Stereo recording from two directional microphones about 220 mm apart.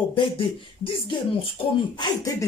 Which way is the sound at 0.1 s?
25° left (ahead or behind).